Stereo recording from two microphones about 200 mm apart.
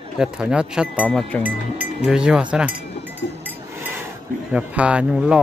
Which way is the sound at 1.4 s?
10° right (ahead or behind).